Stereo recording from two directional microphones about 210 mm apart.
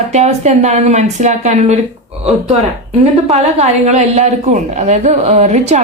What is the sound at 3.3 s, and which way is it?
Speech, 30° right (ahead or behind).